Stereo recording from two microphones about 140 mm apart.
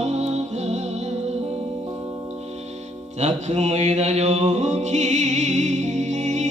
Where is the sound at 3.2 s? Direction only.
50° right (ahead or behind).